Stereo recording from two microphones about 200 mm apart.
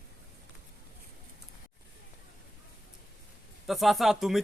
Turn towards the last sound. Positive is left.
turn(degrees=0)  # may be behind; listen again after turning